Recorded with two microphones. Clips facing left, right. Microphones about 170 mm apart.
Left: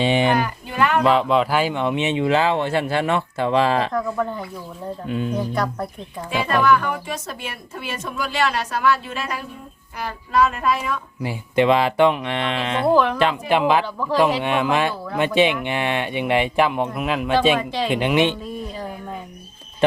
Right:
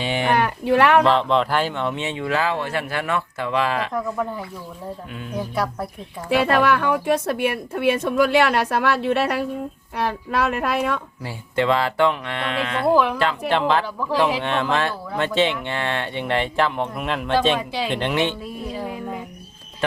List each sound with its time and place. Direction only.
0.0 s speech: 25° left (ahead or behind)
0.3 s speech: 75° right (ahead or behind)
1.0 s speech: 5° left (ahead or behind); by 3.8 s 30° left (ahead or behind)
3.9 s speech: 5° right (ahead or behind)
5.0 s speech: 30° left (ahead or behind)
6.3 s speech: 70° right (ahead or behind)
11.2 s speech: 15° left (ahead or behind)
12.9 s speech: 5° right (ahead or behind)
13.5 s speech: 10° left (ahead or behind)